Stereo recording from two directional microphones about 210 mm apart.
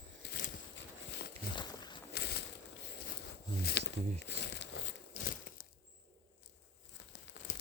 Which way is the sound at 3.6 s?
55° left (ahead or behind).